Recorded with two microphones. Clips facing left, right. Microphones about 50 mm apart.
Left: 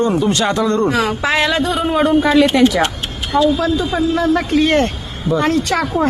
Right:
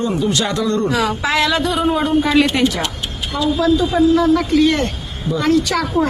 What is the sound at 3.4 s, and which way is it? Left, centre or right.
A man's voice, left.